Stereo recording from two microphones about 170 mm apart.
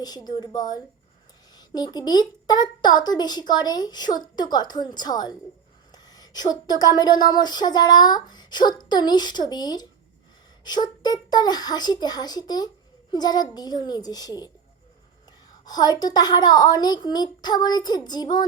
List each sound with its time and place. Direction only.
0.0 s speech: 25° left (ahead or behind)
15.6 s speech: 25° left (ahead or behind)